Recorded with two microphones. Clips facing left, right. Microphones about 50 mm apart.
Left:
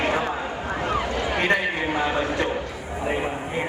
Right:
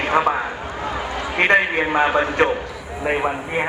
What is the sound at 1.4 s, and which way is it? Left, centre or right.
A man's voice, right.